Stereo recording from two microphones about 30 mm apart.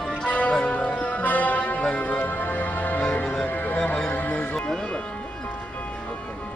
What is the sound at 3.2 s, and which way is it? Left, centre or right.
Music, left.